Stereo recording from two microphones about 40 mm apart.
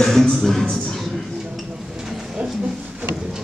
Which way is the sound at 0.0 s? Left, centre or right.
Centre.